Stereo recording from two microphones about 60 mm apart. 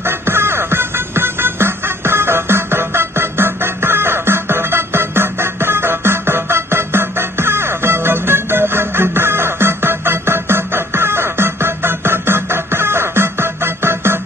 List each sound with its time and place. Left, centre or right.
0.0 s music: right